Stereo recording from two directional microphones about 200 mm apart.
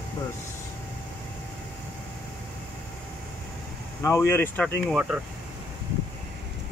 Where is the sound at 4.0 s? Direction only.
15° left (ahead or behind).